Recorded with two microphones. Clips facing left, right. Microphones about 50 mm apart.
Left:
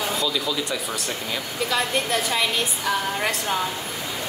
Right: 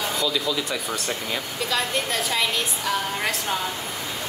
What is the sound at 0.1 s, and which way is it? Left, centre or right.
A woman's voice, centre.